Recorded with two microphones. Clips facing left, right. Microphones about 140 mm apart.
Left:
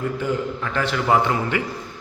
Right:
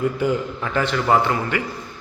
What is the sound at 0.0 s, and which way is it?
Speech, 15° right (ahead or behind).